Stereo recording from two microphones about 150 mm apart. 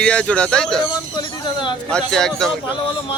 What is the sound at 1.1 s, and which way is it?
Speech, 30° left (ahead or behind).